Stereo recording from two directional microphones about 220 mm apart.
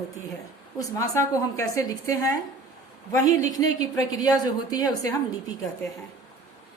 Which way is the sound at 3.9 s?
15° left (ahead or behind).